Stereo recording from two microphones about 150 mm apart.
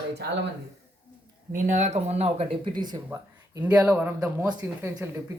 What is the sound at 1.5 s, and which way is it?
Speech, 55° right (ahead or behind).